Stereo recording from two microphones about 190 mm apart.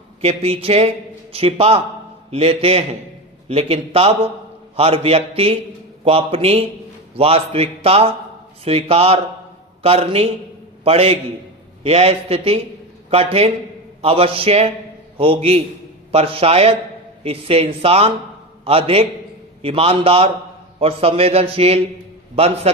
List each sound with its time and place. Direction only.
0.2 s a man's voice: 30° right (ahead or behind)